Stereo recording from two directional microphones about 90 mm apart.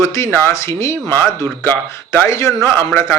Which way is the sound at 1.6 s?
20° left (ahead or behind).